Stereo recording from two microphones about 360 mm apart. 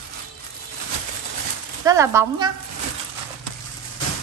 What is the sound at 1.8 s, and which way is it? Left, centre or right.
Speech, centre.